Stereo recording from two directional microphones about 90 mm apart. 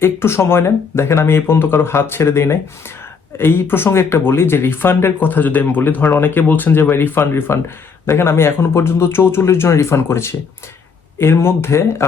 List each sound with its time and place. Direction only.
0.0 s speech: 25° left (ahead or behind)